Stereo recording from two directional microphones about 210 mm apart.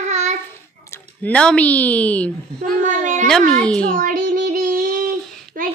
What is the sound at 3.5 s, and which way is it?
Speech, 5° left (ahead or behind).